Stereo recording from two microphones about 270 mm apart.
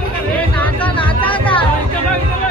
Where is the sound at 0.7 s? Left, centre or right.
Centre.